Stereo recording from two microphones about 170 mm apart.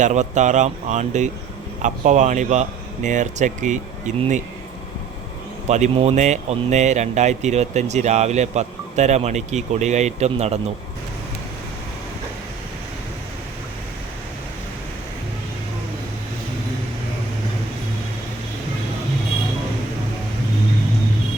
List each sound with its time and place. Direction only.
0.0 s speech: 45° right (ahead or behind)
5.6 s speech: 40° right (ahead or behind)